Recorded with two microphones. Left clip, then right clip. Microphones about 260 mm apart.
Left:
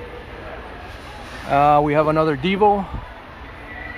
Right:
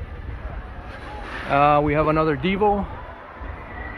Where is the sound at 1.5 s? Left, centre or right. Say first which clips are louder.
Left 2 dB; centre.